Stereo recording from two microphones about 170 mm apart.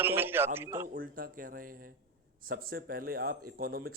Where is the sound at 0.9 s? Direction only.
60° right (ahead or behind).